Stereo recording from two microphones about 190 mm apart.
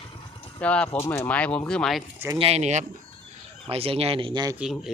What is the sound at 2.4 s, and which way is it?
Speech, 35° right (ahead or behind).